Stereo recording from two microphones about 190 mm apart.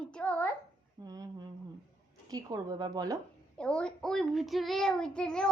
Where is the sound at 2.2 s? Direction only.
20° right (ahead or behind).